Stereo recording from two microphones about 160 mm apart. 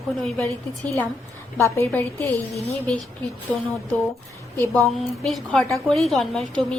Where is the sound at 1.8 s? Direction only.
10° left (ahead or behind).